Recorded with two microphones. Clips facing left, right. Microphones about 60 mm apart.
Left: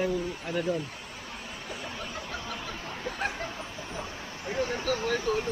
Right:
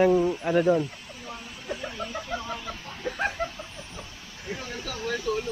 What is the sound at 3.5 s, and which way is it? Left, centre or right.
Vehicle, left.